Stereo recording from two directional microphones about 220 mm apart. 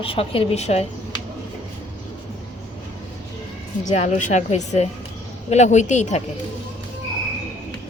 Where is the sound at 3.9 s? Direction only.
35° left (ahead or behind).